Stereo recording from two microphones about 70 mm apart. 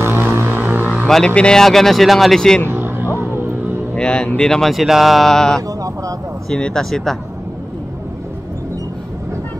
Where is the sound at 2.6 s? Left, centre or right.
Right.